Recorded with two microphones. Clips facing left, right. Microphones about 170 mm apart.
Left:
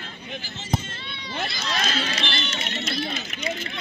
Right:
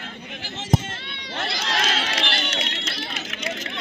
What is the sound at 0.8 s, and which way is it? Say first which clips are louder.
Run: right 2 dB; 85° right.